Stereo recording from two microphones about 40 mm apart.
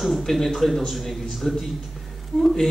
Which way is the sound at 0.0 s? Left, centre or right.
Centre.